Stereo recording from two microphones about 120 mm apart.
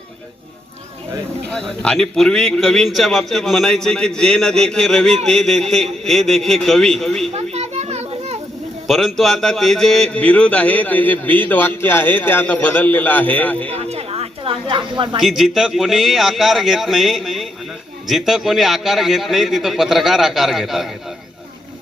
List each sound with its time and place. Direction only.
1.5 s a man's voice: 5° left (ahead or behind)
7.3 s children playing: 60° right (ahead or behind)
8.9 s a man's voice: centre (ahead or behind)
13.7 s a sound: 60° right (ahead or behind); by 15.2 s 45° right (ahead or behind)
15.2 s a man's voice: 5° right (ahead or behind)